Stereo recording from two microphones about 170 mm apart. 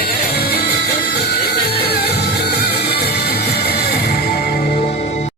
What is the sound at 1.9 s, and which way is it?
Music, 70° left (ahead or behind).